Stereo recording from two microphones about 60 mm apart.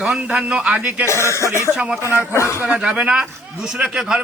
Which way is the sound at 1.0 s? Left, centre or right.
Left.